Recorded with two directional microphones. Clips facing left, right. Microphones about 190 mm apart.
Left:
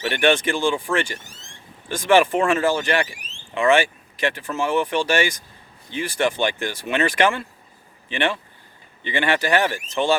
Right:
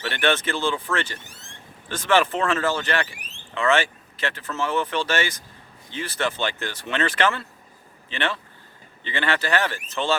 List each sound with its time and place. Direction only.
0.1 s speech: 15° left (ahead or behind)
3.2 s a sound: 60° right (ahead or behind)
3.5 s speech: 15° left (ahead or behind)